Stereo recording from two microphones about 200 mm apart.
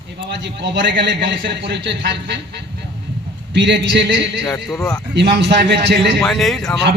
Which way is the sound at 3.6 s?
60° right (ahead or behind).